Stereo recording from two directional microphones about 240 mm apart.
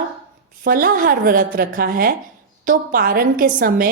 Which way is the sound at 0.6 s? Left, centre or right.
Right.